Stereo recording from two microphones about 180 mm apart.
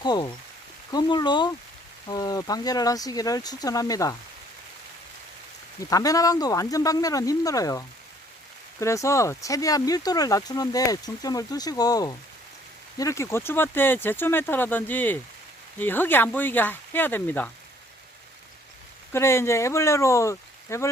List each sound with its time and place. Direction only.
0.0 s speech: 25° left (ahead or behind)
5.9 s speech: 20° left (ahead or behind)
19.1 s speech: 15° left (ahead or behind)